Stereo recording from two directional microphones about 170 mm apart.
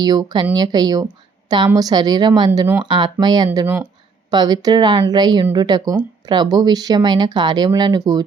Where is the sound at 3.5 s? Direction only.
10° right (ahead or behind).